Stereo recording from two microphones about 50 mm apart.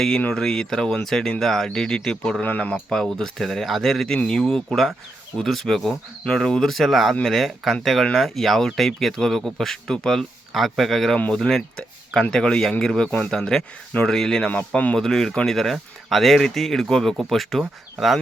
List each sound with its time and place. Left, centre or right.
0.3 s speech: centre
2.4 s speech: left
2.9 s speech: centre
10.5 s speech: centre; by 14.9 s left
14.9 s speech: centre